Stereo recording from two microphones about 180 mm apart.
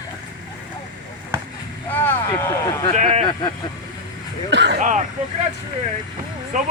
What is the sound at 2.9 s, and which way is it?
Speech, 40° right (ahead or behind).